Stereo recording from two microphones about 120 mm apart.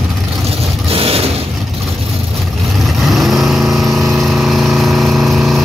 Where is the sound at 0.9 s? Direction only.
55° right (ahead or behind).